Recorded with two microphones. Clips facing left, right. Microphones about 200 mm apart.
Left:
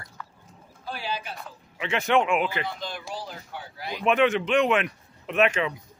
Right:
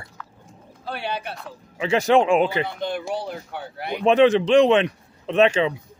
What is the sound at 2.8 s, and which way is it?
Speech, 65° right (ahead or behind).